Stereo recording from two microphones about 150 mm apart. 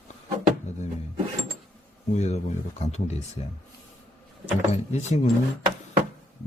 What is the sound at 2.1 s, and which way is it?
Speech, 45° left (ahead or behind).